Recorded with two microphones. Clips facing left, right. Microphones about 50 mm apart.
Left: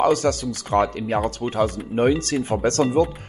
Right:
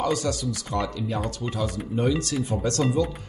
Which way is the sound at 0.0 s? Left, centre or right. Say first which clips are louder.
Left 6 dB; left.